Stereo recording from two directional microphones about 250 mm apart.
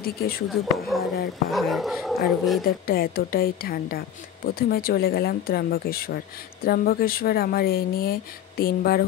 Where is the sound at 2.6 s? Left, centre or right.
Left.